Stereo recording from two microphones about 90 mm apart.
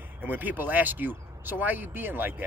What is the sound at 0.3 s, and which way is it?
Speech, 20° right (ahead or behind).